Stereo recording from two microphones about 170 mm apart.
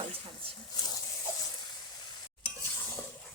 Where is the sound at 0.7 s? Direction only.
25° left (ahead or behind).